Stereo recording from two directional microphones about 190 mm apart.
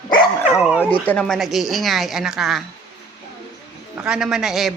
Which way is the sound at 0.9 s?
5° left (ahead or behind).